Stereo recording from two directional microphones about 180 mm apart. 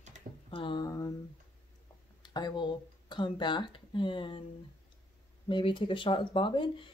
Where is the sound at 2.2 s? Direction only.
25° left (ahead or behind).